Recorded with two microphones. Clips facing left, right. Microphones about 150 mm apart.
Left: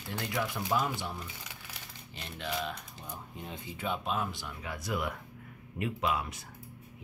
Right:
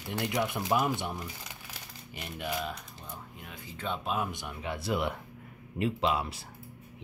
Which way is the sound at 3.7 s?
5° left (ahead or behind).